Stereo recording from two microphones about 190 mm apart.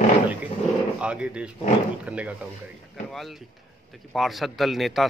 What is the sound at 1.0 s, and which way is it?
A man's voice, 5° right (ahead or behind).